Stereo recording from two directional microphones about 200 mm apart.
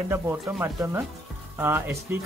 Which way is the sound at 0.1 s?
10° right (ahead or behind).